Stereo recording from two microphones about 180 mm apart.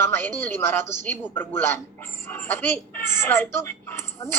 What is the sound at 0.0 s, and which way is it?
A woman's voice, 15° left (ahead or behind).